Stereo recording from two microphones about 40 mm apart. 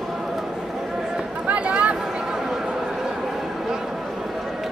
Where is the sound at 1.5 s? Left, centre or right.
Right.